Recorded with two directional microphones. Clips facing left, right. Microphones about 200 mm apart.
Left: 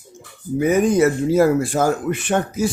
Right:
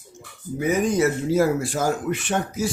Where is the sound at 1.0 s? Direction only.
55° left (ahead or behind).